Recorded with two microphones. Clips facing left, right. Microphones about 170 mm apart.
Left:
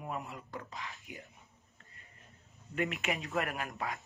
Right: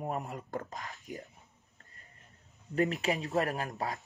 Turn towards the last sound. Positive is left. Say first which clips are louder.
# right 4 dB
turn(degrees=-35)  # may be behind; listen again after turning